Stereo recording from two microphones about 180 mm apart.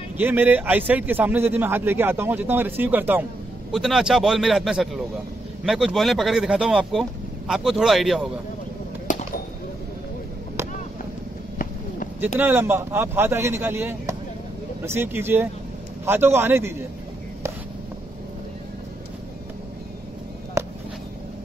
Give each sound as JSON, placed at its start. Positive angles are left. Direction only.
{"t": 0.2, "sound": "a man's voice", "side_deg": -10}
{"t": 9.1, "sound": "bird", "side_deg": 45}
{"t": 12.4, "sound": "a man's voice", "side_deg": -10}
{"t": 20.6, "sound": "a sound", "side_deg": -15}